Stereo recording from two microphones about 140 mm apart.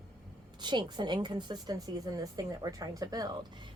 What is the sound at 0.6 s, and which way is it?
A woman's voice, 35° right (ahead or behind).